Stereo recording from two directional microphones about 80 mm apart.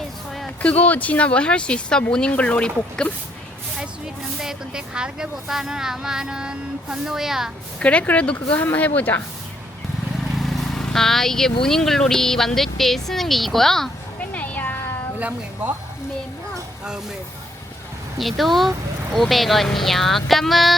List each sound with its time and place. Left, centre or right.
0.6 s speech: centre
4.4 s speech: centre
7.8 s a woman's voice: centre
10.3 s vehicle: centre
11.6 s speech: centre
14.3 s cat: centre
15.2 s speech: centre
18.2 s speech: centre